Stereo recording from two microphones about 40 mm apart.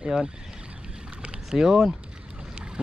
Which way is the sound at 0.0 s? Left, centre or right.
Centre.